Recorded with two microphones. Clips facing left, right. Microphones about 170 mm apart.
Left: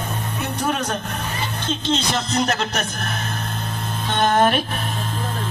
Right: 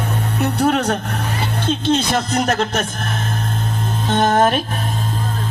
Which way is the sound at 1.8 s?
55° right (ahead or behind).